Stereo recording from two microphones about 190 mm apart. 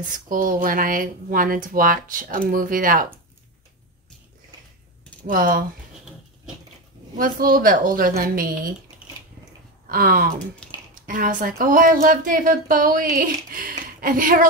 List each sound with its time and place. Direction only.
0.0 s speech: 45° right (ahead or behind)
5.2 s speech: 45° right (ahead or behind)
7.2 s speech: 50° right (ahead or behind)
9.8 s speech: 50° right (ahead or behind)
10.6 s a sound: 5° left (ahead or behind)
11.1 s speech: 45° right (ahead or behind)